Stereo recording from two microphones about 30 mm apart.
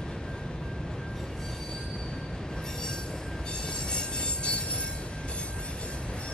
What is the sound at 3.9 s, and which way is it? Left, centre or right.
Train, left.